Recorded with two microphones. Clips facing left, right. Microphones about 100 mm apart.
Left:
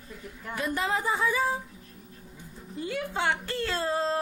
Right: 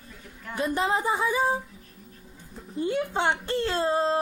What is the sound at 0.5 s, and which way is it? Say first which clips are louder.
A woman's voice: right 3 dB; 25° right (ahead or behind).